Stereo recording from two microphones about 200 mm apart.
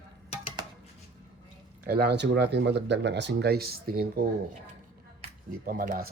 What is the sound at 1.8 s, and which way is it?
Speech, 55° right (ahead or behind).